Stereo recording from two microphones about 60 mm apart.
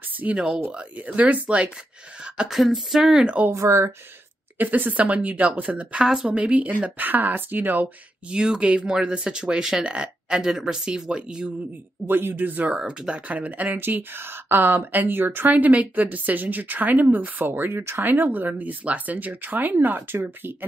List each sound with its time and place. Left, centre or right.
0.2 s speech: centre
2.3 s speech: centre
3.5 s speech: right
4.6 s speech: right
8.3 s speech: centre
12.1 s speech: right
12.7 s speech: centre; by 20.5 s right